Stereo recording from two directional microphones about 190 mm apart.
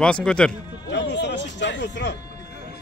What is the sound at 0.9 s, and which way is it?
Speech, 65° left (ahead or behind).